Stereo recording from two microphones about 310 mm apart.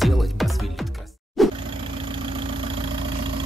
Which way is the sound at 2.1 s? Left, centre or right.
Centre.